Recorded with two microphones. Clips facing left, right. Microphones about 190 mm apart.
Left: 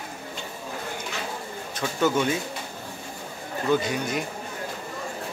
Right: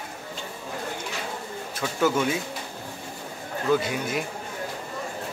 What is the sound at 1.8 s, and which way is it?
Speech, 5° right (ahead or behind).